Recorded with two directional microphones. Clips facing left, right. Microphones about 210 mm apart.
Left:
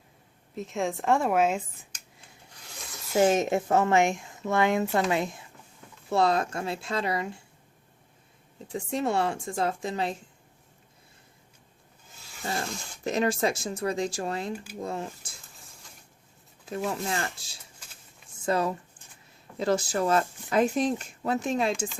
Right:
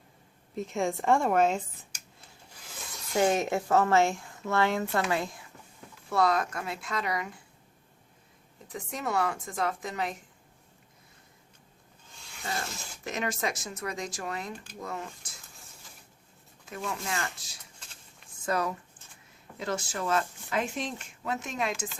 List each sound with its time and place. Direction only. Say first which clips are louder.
0.5 s a woman's voice: even; centre (ahead or behind)
2.5 s rub: even; centre (ahead or behind)
3.2 s a woman's voice: left 3 dB; 20° left (ahead or behind)
8.6 s a woman's voice: left 6 dB; 30° left (ahead or behind)
12.5 s a woman's voice: left 4 dB; centre (ahead or behind)
13.1 s a woman's voice: left 7 dB; 30° left (ahead or behind)
15.5 s a sound: left 1 dB; centre (ahead or behind)
16.6 s a woman's voice: left 5 dB; 35° left (ahead or behind)